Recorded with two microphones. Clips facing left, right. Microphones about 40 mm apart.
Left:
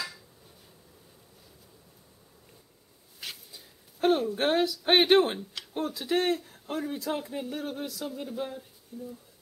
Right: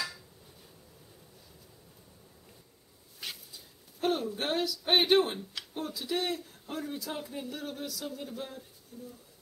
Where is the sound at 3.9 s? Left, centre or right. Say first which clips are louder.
Left 6 dB; centre.